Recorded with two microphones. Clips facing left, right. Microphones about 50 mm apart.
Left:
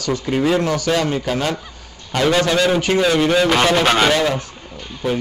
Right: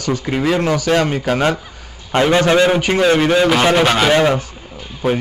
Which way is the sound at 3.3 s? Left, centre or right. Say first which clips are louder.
Right 2 dB; centre.